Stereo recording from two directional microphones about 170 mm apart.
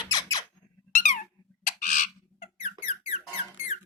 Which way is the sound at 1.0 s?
50° left (ahead or behind).